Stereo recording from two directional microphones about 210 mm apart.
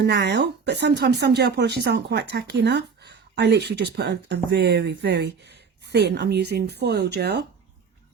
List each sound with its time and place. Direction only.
0.0 s speech: 55° right (ahead or behind)